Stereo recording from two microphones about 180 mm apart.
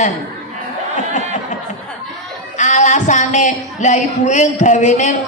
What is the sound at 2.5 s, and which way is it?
Speech, 40° left (ahead or behind).